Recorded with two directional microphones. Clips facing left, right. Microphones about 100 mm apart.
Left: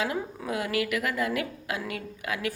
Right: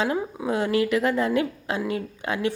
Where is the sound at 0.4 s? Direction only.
30° right (ahead or behind).